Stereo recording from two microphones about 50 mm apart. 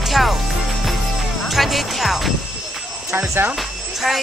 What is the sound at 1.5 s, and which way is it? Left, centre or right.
Music, centre.